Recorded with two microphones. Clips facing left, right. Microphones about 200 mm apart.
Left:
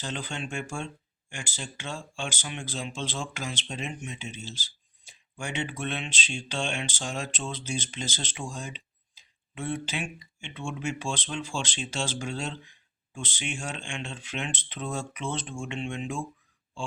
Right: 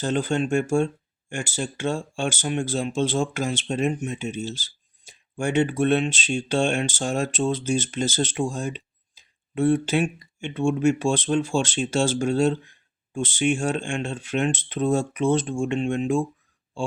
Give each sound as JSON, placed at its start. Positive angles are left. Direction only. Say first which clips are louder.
{"t": 0.0, "sound": "speech", "louder": "right 12 dB", "side_deg": -45}